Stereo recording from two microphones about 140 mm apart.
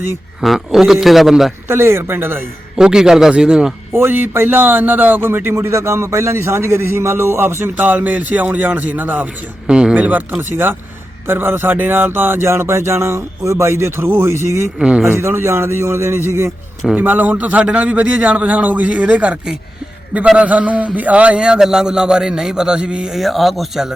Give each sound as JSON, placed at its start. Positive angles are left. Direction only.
{"t": 0.4, "sound": "a man's voice", "side_deg": 0}
{"t": 1.6, "sound": "a man's voice", "side_deg": -15}
{"t": 2.7, "sound": "a man's voice", "side_deg": -5}
{"t": 14.8, "sound": "a man's voice", "side_deg": -5}
{"t": 15.1, "sound": "a man's voice", "side_deg": -15}